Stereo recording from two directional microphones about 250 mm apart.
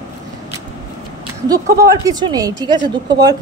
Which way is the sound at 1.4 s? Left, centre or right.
Centre.